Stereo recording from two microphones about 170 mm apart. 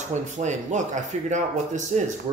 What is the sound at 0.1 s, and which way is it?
Speech, 45° right (ahead or behind).